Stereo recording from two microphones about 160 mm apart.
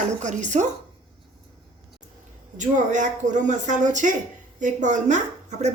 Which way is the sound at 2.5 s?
50° right (ahead or behind).